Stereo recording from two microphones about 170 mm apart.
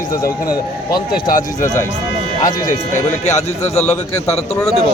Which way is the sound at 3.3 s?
40° left (ahead or behind).